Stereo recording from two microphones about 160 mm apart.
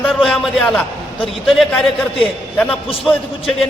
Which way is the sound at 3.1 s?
Centre (ahead or behind).